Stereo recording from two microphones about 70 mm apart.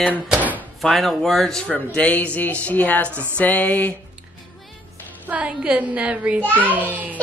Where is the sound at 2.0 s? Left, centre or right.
Left.